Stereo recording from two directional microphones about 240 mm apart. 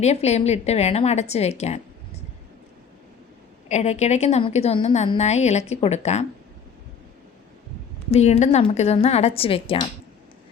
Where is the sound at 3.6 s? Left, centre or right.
Left.